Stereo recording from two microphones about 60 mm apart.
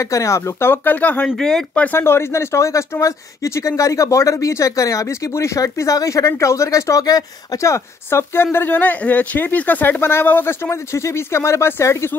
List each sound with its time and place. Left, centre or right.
0.0 s speech: left
0.6 s speech: left
1.1 s speech: centre
2.0 s speech: left
7.6 s speech: left
8.7 s speech: left
10.7 s speech: left